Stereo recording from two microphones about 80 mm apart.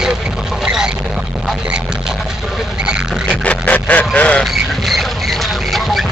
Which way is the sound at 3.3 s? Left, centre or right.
Centre.